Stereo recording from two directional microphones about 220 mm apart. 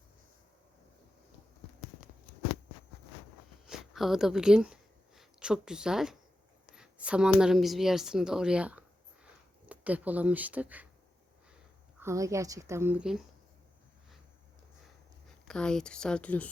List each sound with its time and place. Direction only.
3.7 s a woman's voice: centre (ahead or behind)
11.9 s a woman's voice: 15° right (ahead or behind)
15.4 s a woman's voice: 5° left (ahead or behind)